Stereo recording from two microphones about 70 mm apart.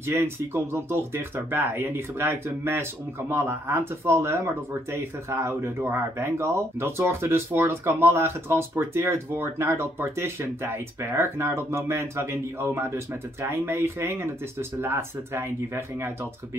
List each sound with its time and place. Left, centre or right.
0.2 s speech: right